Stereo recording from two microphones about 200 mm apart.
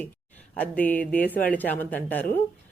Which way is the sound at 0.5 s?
5° left (ahead or behind).